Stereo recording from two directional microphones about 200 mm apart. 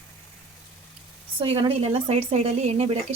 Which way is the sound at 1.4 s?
25° right (ahead or behind).